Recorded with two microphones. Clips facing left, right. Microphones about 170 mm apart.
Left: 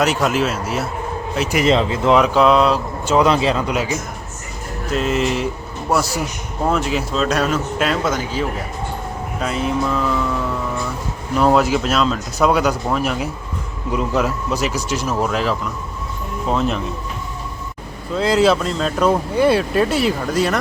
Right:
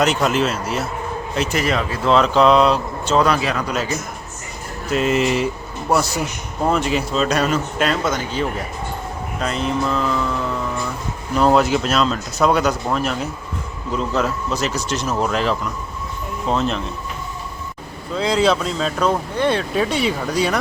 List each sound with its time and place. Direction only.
0.0 s speech: 5° left (ahead or behind)
3.2 s speech: 25° left (ahead or behind)
4.9 s speech: centre (ahead or behind)
6.7 s speech: centre (ahead or behind)
11.3 s speech: 5° left (ahead or behind)
18.1 s speech: centre (ahead or behind)